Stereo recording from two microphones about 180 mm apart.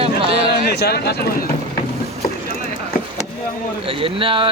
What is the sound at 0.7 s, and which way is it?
Speech, 65° left (ahead or behind).